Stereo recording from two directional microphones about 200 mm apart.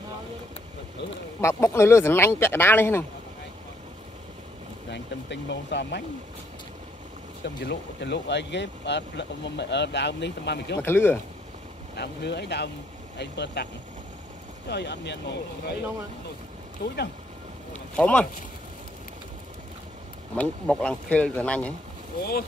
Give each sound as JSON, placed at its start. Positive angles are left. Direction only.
{"t": 1.4, "sound": "speech", "side_deg": 15}
{"t": 4.9, "sound": "speech", "side_deg": 60}
{"t": 7.4, "sound": "speech", "side_deg": 60}
{"t": 10.8, "sound": "speech", "side_deg": 10}
{"t": 11.9, "sound": "speech", "side_deg": 55}
{"t": 14.7, "sound": "speech", "side_deg": 60}
{"t": 16.8, "sound": "speech", "side_deg": 55}
{"t": 17.9, "sound": "speech", "side_deg": 5}
{"t": 20.3, "sound": "speech", "side_deg": 5}